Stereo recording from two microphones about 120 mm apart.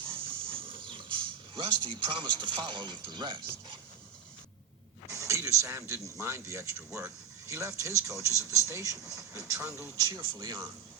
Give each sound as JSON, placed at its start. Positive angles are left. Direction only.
{"t": 0.3, "sound": "speech", "side_deg": -50}
{"t": 5.1, "sound": "speech", "side_deg": -25}